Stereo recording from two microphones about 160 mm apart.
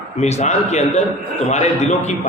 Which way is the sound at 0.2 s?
45° left (ahead or behind).